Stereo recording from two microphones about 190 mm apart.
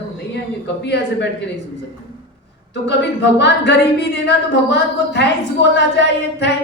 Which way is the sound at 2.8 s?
65° left (ahead or behind).